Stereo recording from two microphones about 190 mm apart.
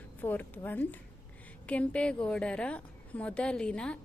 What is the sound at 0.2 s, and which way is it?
A woman's voice, 10° left (ahead or behind).